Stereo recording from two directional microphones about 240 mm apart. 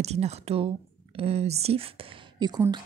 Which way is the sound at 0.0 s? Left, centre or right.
Right.